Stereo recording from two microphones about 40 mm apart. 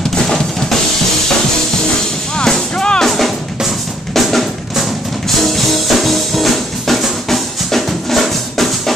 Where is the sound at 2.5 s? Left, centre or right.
Centre.